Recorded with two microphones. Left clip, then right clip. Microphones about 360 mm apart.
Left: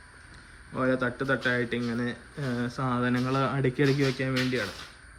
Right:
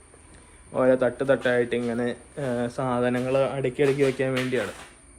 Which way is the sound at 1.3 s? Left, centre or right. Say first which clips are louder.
Right 4 dB; centre.